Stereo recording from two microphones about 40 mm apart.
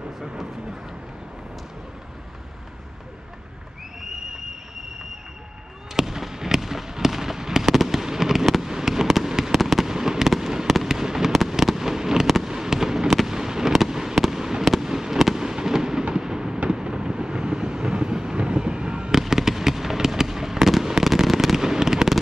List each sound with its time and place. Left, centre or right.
5.9 s fireworks: centre
16.6 s vehicle: right
20.5 s fireworks: centre